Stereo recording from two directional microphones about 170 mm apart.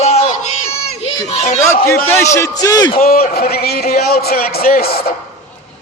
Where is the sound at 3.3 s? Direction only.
65° left (ahead or behind).